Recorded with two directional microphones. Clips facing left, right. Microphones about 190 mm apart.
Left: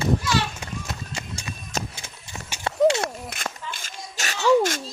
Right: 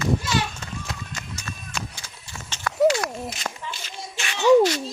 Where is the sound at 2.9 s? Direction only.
25° left (ahead or behind).